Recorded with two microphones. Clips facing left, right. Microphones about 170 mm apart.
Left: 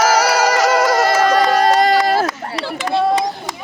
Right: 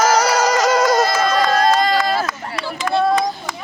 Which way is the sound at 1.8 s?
70° left (ahead or behind).